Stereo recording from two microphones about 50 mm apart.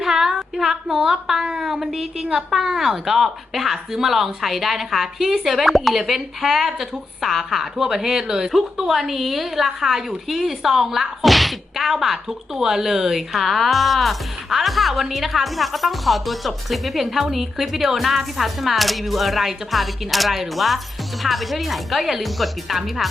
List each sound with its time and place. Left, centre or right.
0.0 s child singing: centre
1.5 s a woman's voice: centre
1.7 s a woman's voice: centre